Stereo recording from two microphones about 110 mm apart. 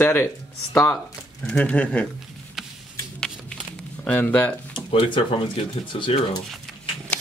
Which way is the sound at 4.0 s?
15° left (ahead or behind).